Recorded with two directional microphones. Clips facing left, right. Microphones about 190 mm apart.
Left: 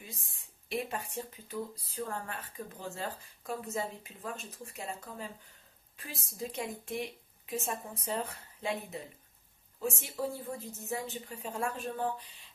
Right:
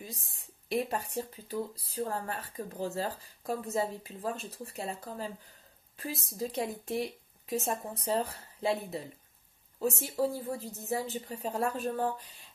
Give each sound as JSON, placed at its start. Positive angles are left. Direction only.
{"t": 0.0, "sound": "speech", "side_deg": -40}